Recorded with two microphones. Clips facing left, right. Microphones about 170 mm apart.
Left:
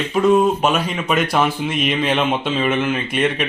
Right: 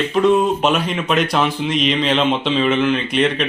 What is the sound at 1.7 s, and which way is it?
Mantra, 55° left (ahead or behind).